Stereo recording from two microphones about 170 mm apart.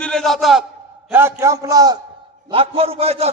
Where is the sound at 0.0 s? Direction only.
5° left (ahead or behind).